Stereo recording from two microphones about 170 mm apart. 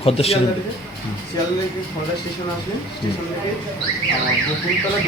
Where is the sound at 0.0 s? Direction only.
35° left (ahead or behind).